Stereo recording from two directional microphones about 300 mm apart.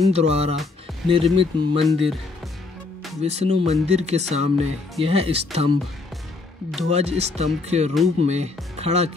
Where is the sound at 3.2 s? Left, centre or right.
Right.